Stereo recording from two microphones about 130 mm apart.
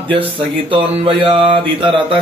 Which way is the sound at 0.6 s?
45° right (ahead or behind).